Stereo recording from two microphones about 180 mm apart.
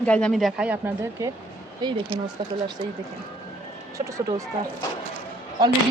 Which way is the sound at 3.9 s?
15° right (ahead or behind).